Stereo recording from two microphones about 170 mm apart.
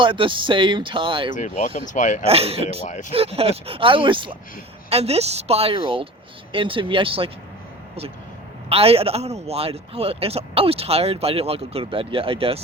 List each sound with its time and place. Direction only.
0.0 s speech: 30° right (ahead or behind)
1.3 s speech: 45° left (ahead or behind)
2.2 s a man's voice: 35° right (ahead or behind)
2.8 s speech: 45° left (ahead or behind)
3.1 s a man's voice: 35° right (ahead or behind)
8.7 s a man's voice: 35° right (ahead or behind)